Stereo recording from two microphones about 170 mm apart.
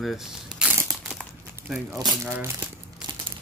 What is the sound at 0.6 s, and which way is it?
Crumpling, 5° right (ahead or behind).